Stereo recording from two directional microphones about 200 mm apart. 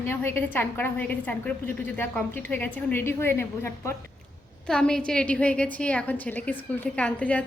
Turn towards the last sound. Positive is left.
turn(degrees=5)  # may be behind; listen again after turning